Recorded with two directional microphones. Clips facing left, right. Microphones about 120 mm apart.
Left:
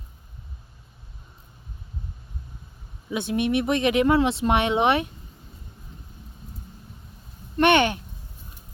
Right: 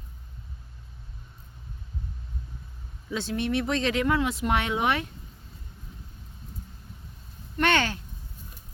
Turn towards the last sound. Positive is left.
turn(degrees=20)  # may be behind; listen again after turning